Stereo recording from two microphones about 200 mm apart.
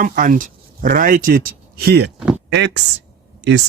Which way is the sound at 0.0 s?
45° right (ahead or behind).